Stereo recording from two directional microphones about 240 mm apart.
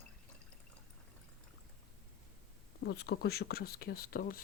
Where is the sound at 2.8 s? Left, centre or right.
Left.